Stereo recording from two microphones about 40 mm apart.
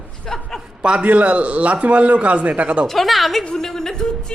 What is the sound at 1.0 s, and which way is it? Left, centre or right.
A man's voice, right.